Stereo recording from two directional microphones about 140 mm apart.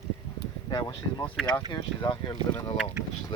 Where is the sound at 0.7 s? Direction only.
30° left (ahead or behind).